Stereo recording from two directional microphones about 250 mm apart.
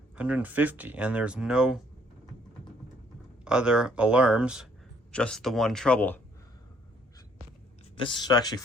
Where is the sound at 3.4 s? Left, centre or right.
Centre.